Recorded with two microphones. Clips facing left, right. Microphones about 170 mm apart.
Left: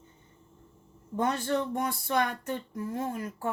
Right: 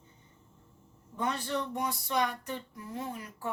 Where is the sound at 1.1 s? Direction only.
45° left (ahead or behind).